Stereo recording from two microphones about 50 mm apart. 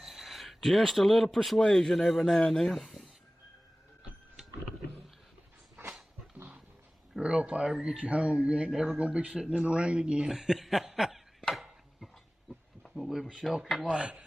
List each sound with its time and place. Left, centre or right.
0.0 s a man's voice: centre
7.2 s speech: right
8.7 s speech: centre
9.0 s speech: right
10.3 s snicker: centre
11.9 s a sound: centre
13.4 s speech: centre
13.8 s speech: right